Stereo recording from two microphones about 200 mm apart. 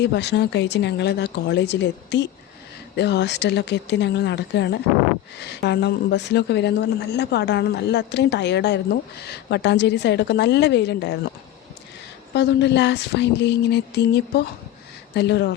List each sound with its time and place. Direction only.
0.0 s a woman's voice: 60° left (ahead or behind)
12.3 s a woman's voice: 60° left (ahead or behind)